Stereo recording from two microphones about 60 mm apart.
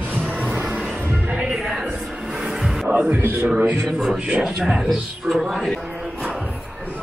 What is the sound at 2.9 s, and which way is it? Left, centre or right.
Speech, right.